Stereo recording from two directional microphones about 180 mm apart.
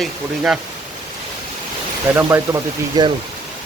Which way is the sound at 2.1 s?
15° right (ahead or behind).